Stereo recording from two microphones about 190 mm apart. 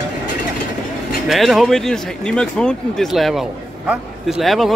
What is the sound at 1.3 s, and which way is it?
Speech, centre (ahead or behind).